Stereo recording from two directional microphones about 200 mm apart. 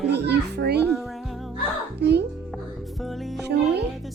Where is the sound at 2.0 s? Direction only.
55° right (ahead or behind).